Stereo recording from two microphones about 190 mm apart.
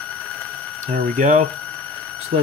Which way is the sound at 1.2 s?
40° right (ahead or behind).